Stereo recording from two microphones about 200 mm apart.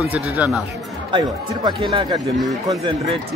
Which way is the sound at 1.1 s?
25° right (ahead or behind).